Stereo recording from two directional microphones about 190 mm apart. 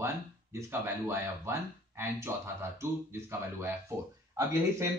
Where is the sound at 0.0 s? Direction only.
15° right (ahead or behind).